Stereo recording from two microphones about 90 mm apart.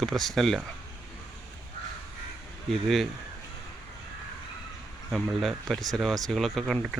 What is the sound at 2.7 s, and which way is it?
Speech, centre (ahead or behind).